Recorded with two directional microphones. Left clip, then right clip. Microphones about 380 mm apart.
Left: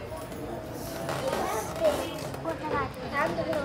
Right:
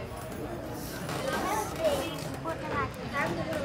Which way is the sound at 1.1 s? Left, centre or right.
Centre.